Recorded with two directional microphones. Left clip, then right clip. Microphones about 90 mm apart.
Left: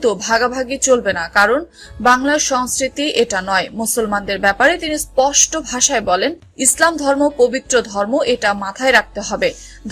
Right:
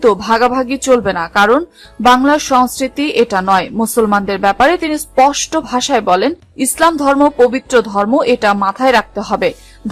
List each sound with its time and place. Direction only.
0.0 s a woman's voice: 40° right (ahead or behind)
0.3 s speech: 30° right (ahead or behind)
1.0 s speech: 25° right (ahead or behind)
2.3 s a woman's voice: 45° right (ahead or behind); by 4.8 s 30° right (ahead or behind)
4.8 s a woman's voice: 45° right (ahead or behind)
5.3 s a woman's voice: 50° right (ahead or behind)
5.7 s speech: 35° right (ahead or behind)
6.9 s speech: 45° right (ahead or behind)